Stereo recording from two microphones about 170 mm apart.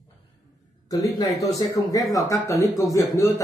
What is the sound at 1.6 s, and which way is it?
A man's voice, 20° left (ahead or behind).